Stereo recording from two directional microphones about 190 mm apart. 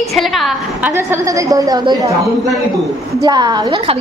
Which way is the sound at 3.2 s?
20° right (ahead or behind).